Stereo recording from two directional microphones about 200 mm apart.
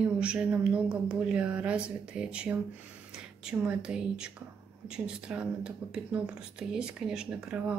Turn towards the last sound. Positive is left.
turn(degrees=-5)  # may be behind; listen again after turning